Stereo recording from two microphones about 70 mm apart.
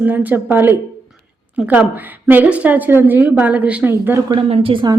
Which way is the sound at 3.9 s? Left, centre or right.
Right.